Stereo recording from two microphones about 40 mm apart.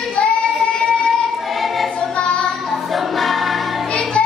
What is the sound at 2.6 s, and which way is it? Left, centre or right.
Music, centre.